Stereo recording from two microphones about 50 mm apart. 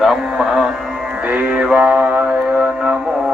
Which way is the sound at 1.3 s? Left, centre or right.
Right.